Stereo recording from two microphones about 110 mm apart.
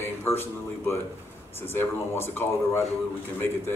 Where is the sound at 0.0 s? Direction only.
20° left (ahead or behind).